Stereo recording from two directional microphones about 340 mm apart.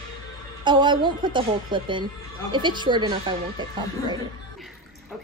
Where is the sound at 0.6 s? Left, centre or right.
Centre.